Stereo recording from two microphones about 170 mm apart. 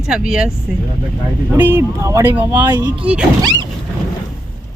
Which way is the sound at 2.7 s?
20° right (ahead or behind).